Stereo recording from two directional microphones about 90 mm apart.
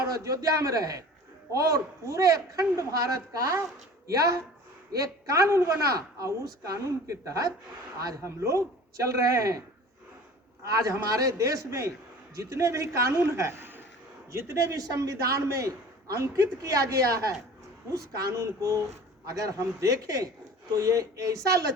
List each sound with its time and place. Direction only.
0.0 s a woman's voice: 35° right (ahead or behind)
10.7 s a woman's voice: 35° right (ahead or behind)